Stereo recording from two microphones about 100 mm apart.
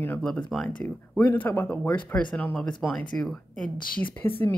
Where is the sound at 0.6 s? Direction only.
20° left (ahead or behind).